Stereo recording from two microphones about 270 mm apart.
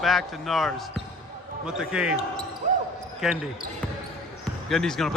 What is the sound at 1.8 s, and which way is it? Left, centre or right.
Speech, centre.